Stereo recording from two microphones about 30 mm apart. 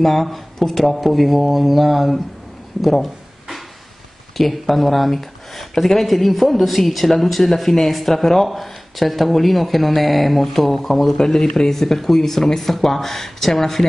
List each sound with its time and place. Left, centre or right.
0.0 s speech: centre
2.8 s a sound: centre
4.4 s speech: centre
8.5 s speech: centre
11.1 s a man's voice: left
11.7 s speech: centre